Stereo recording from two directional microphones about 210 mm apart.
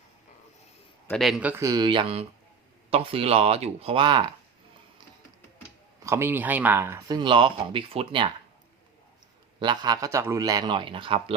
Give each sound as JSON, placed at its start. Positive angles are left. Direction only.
{"t": 1.0, "sound": "a man's voice", "side_deg": 0}
{"t": 6.1, "sound": "speech", "side_deg": -10}
{"t": 9.6, "sound": "a man's voice", "side_deg": -20}